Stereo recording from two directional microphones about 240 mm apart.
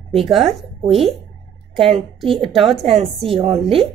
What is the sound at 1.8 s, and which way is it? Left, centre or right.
Speech, right.